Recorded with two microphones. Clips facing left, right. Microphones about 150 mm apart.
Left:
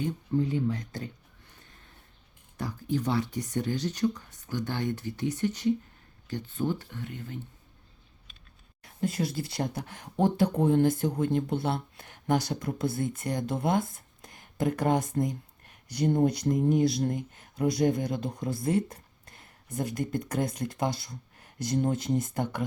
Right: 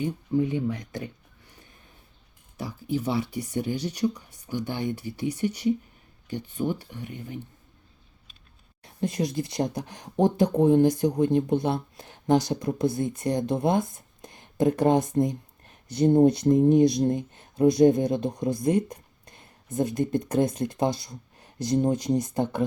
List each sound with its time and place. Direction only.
0.0 s speech: 15° right (ahead or behind)
2.6 s speech: 10° right (ahead or behind)
8.8 s speech: 20° right (ahead or behind)